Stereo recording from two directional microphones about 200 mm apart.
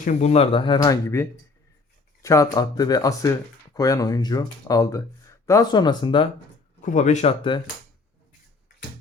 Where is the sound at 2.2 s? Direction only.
15° left (ahead or behind).